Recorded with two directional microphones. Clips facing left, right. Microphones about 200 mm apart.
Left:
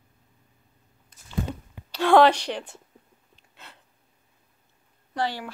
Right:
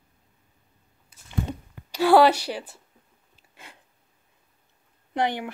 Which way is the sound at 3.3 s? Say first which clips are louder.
Right 1 dB; 10° right (ahead or behind).